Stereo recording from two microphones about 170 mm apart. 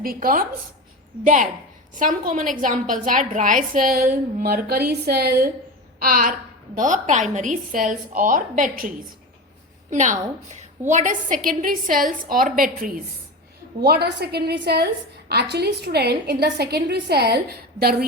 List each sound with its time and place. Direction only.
0.0 s a woman's voice: 60° right (ahead or behind)
6.0 s a woman's voice: 55° right (ahead or behind)
9.9 s a woman's voice: 45° right (ahead or behind)
13.8 s a woman's voice: 70° right (ahead or behind)